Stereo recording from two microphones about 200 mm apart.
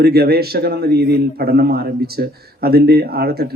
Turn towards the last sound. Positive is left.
turn(degrees=-50)  # may be behind; listen again after turning